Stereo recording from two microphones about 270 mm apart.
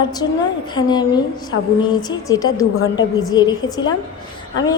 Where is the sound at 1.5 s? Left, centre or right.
Left.